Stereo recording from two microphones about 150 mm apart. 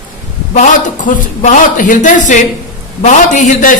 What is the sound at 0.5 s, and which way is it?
A man's voice, 55° left (ahead or behind).